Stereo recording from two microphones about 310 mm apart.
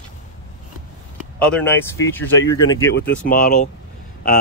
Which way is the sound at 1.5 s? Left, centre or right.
Centre.